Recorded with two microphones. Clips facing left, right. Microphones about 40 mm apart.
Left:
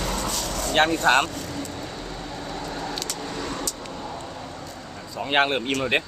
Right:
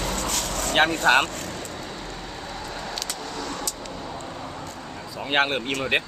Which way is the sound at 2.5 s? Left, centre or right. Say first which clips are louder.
Left 2 dB; centre.